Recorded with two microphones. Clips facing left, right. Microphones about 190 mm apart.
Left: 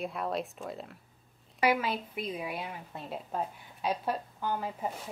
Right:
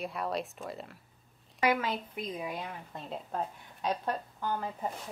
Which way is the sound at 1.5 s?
10° left (ahead or behind).